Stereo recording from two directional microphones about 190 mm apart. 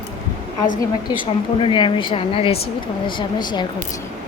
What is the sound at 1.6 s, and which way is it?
Speech, 25° left (ahead or behind).